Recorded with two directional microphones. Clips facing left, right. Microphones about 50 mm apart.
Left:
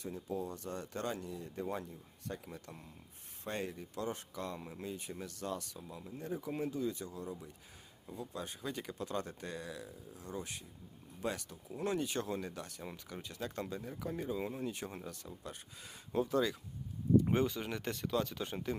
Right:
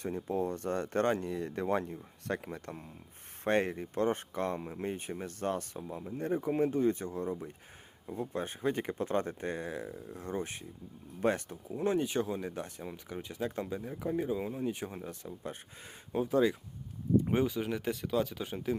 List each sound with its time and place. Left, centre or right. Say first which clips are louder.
0.0 s speech: right 7 dB; right
11.8 s speech: right 6 dB; right
15.0 s speech: right 5 dB; right; by 18.8 s centre